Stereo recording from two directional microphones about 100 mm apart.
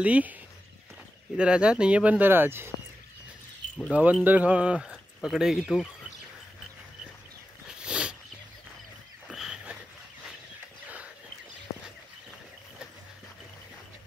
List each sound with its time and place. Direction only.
0.0 s speech: 15° right (ahead or behind)
3.9 s speech: 15° right (ahead or behind)
7.6 s a sound: 10° right (ahead or behind)
9.3 s dog: 5° right (ahead or behind)